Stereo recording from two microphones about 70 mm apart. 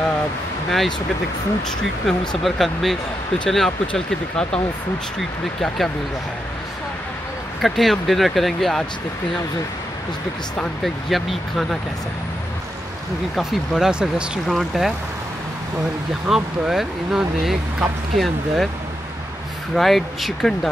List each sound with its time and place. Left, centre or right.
0.7 s speech: centre
2.0 s speech: centre
7.6 s speech: centre
10.8 s speech: centre
13.4 s speech: centre
16.3 s speech: centre
19.7 s speech: centre